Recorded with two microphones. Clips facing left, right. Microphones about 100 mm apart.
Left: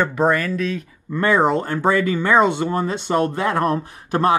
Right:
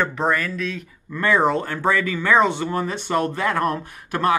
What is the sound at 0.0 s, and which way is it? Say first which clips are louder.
Speech: left 3 dB; 15° left (ahead or behind).